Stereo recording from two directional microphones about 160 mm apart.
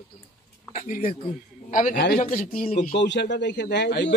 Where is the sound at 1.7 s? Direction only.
55° left (ahead or behind).